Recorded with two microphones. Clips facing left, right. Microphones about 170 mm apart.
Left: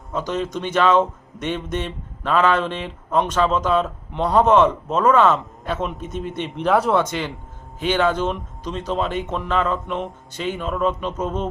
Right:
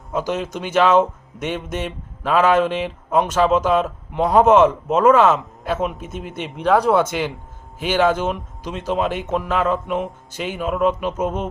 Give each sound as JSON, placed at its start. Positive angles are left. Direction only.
{"t": 0.1, "sound": "speech", "side_deg": -5}